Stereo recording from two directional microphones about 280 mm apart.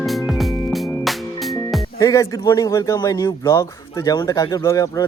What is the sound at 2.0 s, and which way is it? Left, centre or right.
A man's voice, centre.